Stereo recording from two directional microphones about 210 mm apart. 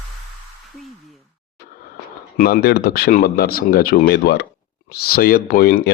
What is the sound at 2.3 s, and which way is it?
Speech, 45° left (ahead or behind).